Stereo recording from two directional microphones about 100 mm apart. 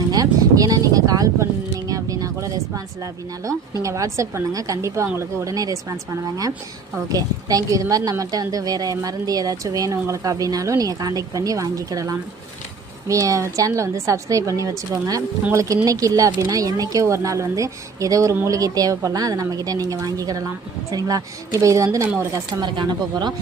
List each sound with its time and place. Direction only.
0.1 s a sound: 40° right (ahead or behind)
5.1 s a woman's voice: 30° right (ahead or behind)
22.6 s speech: 50° right (ahead or behind)